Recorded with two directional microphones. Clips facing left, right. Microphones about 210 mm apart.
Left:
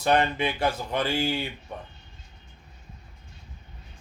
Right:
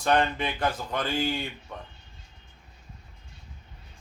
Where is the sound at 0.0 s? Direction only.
10° left (ahead or behind).